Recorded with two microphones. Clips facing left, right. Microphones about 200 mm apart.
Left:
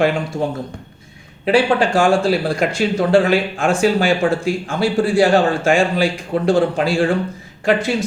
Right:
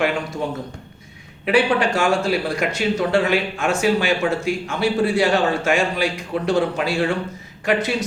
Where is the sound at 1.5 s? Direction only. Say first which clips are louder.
Left 3 dB; 30° left (ahead or behind).